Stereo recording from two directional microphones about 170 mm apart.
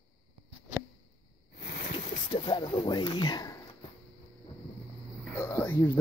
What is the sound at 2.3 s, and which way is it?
Speech, 25° left (ahead or behind).